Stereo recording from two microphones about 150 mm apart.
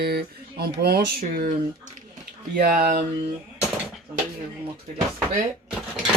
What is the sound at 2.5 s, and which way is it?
Speech, 80° right.